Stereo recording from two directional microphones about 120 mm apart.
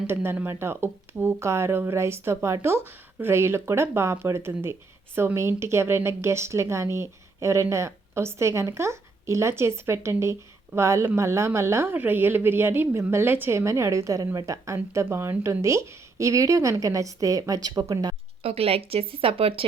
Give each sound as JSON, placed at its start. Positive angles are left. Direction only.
{"t": 0.1, "sound": "speech", "side_deg": -20}
{"t": 18.4, "sound": "speech", "side_deg": -55}